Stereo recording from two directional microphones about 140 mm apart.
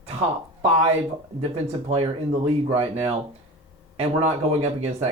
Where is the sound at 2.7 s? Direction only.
45° right (ahead or behind).